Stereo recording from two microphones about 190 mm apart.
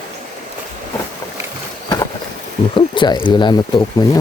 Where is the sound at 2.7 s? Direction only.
25° left (ahead or behind).